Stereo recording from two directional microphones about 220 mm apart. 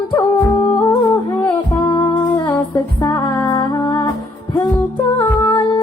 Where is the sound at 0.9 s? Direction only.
10° left (ahead or behind).